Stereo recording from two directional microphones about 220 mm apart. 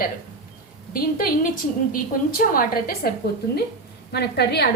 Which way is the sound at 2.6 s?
40° left (ahead or behind).